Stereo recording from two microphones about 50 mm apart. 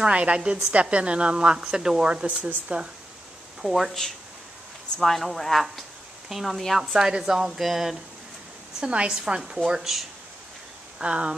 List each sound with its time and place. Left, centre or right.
0.0 s a woman's voice: right
3.6 s speech: centre
5.0 s speech: centre
8.7 s a woman's voice: centre
11.0 s a woman's voice: right